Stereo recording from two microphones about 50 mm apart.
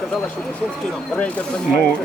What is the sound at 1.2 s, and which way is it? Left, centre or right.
Speech, left.